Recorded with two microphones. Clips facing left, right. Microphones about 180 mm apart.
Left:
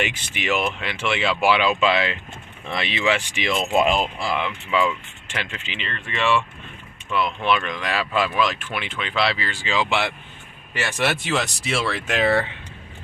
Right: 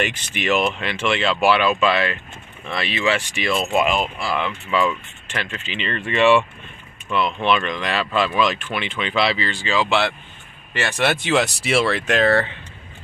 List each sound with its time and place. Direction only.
0.4 s speech: 10° left (ahead or behind)
3.8 s speech: 30° left (ahead or behind)
4.2 s speech: 15° left (ahead or behind)
5.8 s speech: centre (ahead or behind)
11.0 s speech: centre (ahead or behind)